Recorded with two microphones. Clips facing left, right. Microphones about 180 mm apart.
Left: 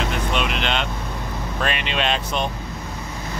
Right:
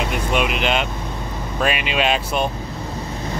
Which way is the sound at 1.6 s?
10° right (ahead or behind).